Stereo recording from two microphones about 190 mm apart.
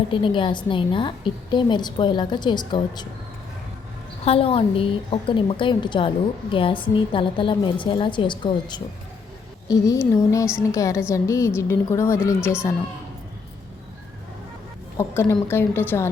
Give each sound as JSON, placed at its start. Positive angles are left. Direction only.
{"t": 0.1, "sound": "a woman's voice", "side_deg": 25}
{"t": 4.3, "sound": "a woman's voice", "side_deg": 30}
{"t": 14.9, "sound": "a woman's voice", "side_deg": 15}